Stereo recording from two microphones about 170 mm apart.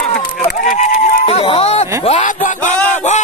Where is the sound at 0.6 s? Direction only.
50° left (ahead or behind).